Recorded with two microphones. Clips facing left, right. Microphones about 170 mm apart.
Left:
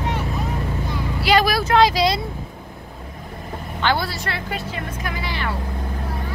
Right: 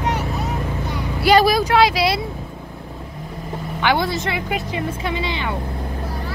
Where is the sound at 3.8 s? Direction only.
15° right (ahead or behind).